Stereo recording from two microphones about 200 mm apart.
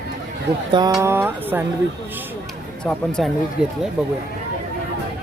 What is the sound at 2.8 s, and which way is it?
Speech, 5° left (ahead or behind).